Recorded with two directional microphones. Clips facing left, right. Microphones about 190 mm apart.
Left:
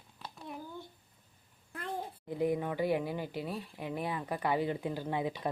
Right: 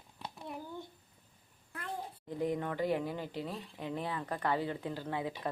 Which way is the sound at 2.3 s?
10° left (ahead or behind).